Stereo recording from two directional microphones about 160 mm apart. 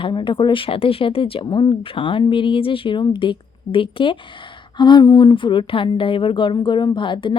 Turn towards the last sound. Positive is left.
turn(degrees=30)  # may be behind; listen again after turning